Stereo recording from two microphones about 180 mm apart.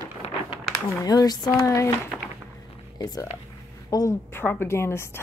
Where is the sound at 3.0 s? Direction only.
20° left (ahead or behind).